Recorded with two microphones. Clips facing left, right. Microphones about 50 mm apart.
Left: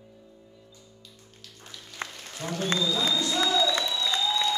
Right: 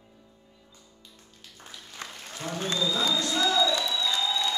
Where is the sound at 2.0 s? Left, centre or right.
Left.